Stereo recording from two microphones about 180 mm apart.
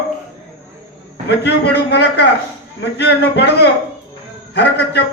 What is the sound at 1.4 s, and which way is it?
A man's voice, 70° left (ahead or behind).